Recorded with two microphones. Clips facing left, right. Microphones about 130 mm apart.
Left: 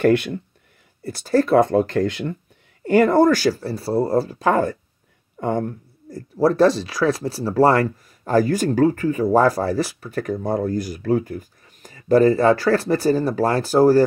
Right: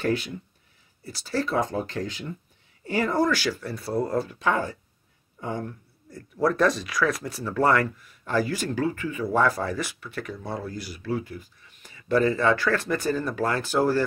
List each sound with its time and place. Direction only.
0.0 s speech: 65° left (ahead or behind)
1.0 s speech: 50° left (ahead or behind)